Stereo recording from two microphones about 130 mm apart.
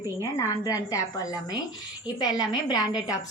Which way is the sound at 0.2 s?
25° left (ahead or behind).